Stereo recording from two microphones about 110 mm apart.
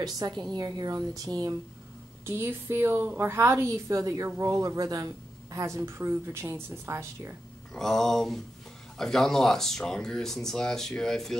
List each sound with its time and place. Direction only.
0.5 s speech: 35° right (ahead or behind)
2.2 s a woman's voice: 20° right (ahead or behind)
7.7 s speech: 5° left (ahead or behind)